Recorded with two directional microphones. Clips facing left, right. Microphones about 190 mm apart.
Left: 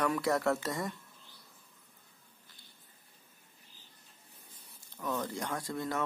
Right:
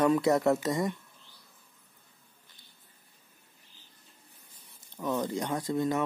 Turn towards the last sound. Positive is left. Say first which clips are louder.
# right 6 dB
turn(degrees=-20)  # may be behind; listen again after turning